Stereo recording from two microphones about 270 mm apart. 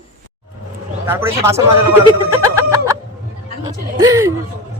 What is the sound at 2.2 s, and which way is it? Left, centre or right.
Music, centre.